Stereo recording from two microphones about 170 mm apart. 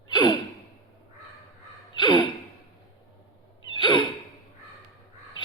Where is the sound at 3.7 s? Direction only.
30° left (ahead or behind).